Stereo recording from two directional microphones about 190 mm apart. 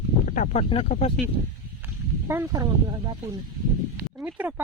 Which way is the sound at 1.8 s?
15° right (ahead or behind).